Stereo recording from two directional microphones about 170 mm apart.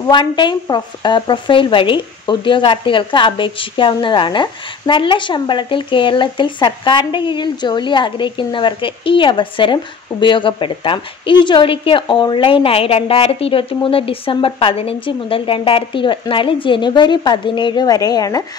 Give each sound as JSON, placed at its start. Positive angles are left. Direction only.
{"t": 0.0, "sound": "a woman's voice", "side_deg": 25}